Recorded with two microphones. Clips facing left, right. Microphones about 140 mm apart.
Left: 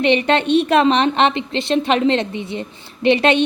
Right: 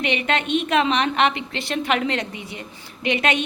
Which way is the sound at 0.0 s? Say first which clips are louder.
Left 7 dB; 30° left (ahead or behind).